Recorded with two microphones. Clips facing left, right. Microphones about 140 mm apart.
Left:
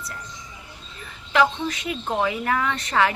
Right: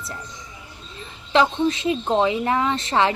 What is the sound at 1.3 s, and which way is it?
Speech, 25° right (ahead or behind).